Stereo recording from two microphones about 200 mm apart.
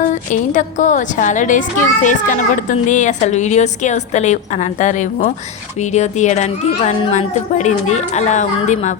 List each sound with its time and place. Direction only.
0.1 s a woman's voice: 40° left (ahead or behind)